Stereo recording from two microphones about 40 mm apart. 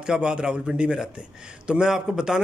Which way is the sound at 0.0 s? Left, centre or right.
Right.